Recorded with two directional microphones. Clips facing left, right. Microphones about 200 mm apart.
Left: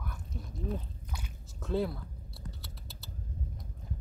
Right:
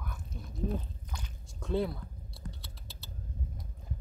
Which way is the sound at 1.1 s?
5° left (ahead or behind).